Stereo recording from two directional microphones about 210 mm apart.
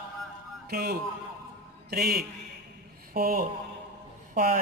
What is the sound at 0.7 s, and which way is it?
A man's voice, 50° right (ahead or behind).